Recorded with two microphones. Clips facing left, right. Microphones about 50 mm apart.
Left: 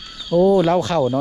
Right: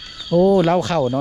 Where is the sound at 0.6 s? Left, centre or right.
Right.